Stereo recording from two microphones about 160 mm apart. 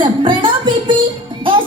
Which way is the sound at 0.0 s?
30° right (ahead or behind).